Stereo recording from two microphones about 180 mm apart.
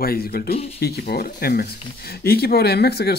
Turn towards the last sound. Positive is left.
turn(degrees=65)  # may be behind; listen again after turning